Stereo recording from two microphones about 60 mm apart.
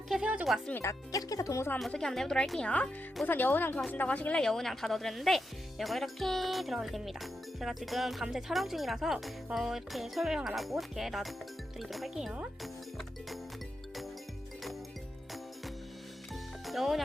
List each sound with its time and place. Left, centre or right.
0.5 s speech: centre
0.9 s speech: left
1.9 s speech: centre
3.2 s speech: left
4.4 s speech: centre
12.1 s speech: centre
16.3 s music: centre